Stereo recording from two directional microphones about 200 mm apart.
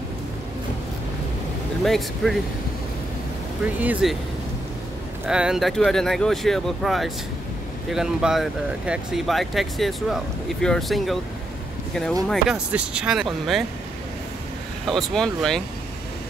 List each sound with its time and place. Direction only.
1.9 s speech: centre (ahead or behind)
3.6 s speech: 5° right (ahead or behind)
5.2 s speech: 5° right (ahead or behind)
14.9 s speech: centre (ahead or behind)